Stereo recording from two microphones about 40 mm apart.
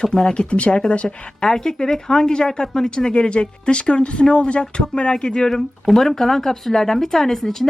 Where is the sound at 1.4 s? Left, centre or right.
Centre.